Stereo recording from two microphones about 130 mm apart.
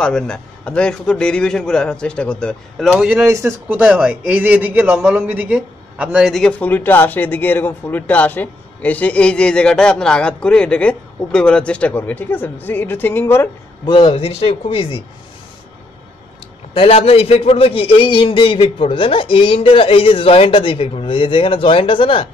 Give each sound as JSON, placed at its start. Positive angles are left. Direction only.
{"t": 0.0, "sound": "speech", "side_deg": 5}
{"t": 2.9, "sound": "speech", "side_deg": -5}
{"t": 3.3, "sound": "a man's voice", "side_deg": -20}
{"t": 6.6, "sound": "speech", "side_deg": 15}
{"t": 13.8, "sound": "a man's voice", "side_deg": 40}
{"t": 16.7, "sound": "a man's voice", "side_deg": 50}